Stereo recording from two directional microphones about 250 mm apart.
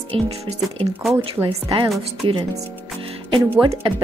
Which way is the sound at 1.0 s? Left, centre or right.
Centre.